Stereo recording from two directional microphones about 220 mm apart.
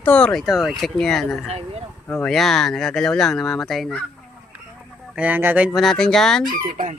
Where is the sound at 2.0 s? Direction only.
5° left (ahead or behind).